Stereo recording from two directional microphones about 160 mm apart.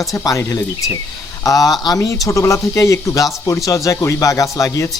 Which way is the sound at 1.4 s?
20° left (ahead or behind).